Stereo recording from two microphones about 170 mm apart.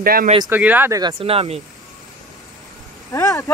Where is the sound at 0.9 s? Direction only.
30° right (ahead or behind).